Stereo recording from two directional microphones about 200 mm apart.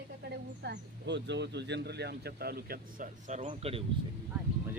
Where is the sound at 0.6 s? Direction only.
60° right (ahead or behind); by 3.8 s 30° right (ahead or behind).